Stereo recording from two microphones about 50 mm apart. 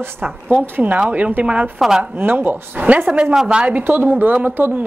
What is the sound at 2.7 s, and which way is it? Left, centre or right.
Speech, right.